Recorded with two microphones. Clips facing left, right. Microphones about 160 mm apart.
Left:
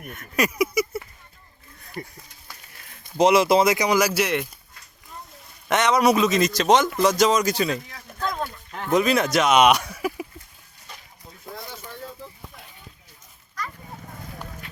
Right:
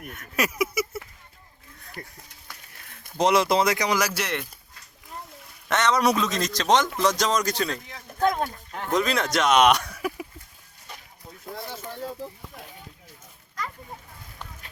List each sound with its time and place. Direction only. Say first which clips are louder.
0.1 s speech: left 3 dB; 5° right (ahead or behind)
3.2 s speech: left 4 dB; 5° left (ahead or behind)
5.6 s a man's voice: left 3 dB; 10° left (ahead or behind)
8.2 s a sound: right 5 dB; 50° right (ahead or behind)
8.9 s speech: left 4 dB; 5° left (ahead or behind)